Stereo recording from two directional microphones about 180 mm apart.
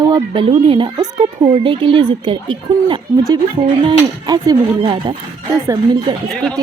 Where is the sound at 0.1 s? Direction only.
25° right (ahead or behind).